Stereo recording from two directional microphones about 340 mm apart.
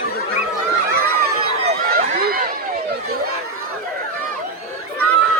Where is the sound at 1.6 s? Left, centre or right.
Right.